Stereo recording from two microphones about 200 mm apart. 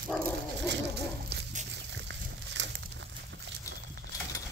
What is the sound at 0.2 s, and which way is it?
Dog, 60° right (ahead or behind).